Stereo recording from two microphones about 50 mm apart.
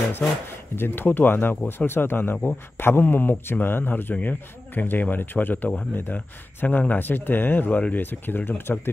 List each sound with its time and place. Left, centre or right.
0.7 s speech: left
4.1 s speech: left